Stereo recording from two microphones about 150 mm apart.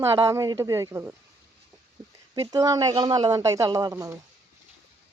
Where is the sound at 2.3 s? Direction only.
25° right (ahead or behind).